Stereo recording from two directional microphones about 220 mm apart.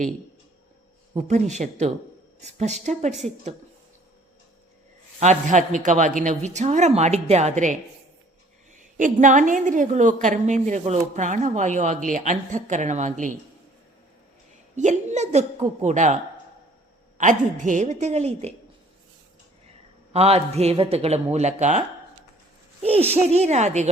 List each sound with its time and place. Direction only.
1.3 s a woman's voice: 30° right (ahead or behind)
5.2 s a woman's voice: 35° right (ahead or behind)
14.8 s a woman's voice: 35° right (ahead or behind)
17.2 s a woman's voice: 35° right (ahead or behind)
20.1 s a woman's voice: 30° right (ahead or behind)